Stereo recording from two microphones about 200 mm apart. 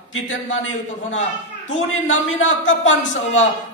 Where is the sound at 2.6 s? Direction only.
75° left (ahead or behind).